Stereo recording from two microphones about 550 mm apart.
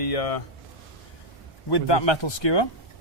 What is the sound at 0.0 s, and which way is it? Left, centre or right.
Speech, left.